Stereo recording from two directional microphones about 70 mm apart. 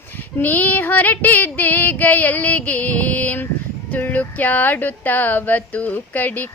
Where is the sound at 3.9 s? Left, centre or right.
Left.